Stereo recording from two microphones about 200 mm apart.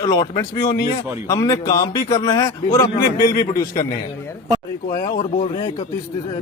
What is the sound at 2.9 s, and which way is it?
Speech, 45° left (ahead or behind).